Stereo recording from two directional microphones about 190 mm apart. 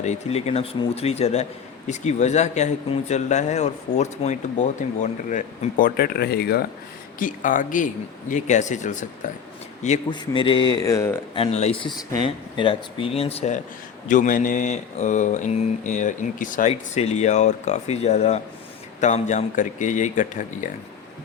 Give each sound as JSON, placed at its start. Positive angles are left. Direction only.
{"t": 0.0, "sound": "speech", "side_deg": 35}
{"t": 7.2, "sound": "speech", "side_deg": 45}
{"t": 10.1, "sound": "speech", "side_deg": 25}
{"t": 11.3, "sound": "speech", "side_deg": 30}